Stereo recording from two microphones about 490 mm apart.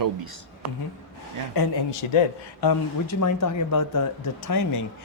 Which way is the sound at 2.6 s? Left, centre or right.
Left.